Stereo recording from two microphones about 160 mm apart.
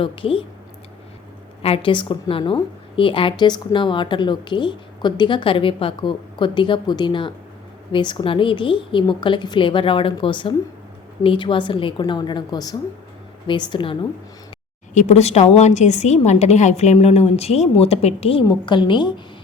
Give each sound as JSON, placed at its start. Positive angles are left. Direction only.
{"t": 0.0, "sound": "a woman's voice", "side_deg": 35}
{"t": 1.6, "sound": "a woman's voice", "side_deg": 35}
{"t": 14.9, "sound": "a woman's voice", "side_deg": 45}